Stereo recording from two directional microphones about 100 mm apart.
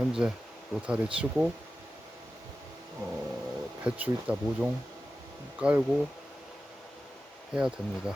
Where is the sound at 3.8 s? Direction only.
15° right (ahead or behind).